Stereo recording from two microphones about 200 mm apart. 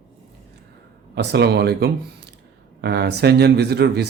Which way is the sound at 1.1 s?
55° right (ahead or behind).